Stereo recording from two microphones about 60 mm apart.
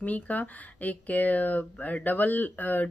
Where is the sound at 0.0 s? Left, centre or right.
Left.